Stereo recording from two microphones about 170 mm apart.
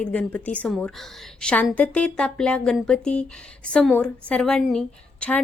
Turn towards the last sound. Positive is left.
turn(degrees=5)  # may be behind; listen again after turning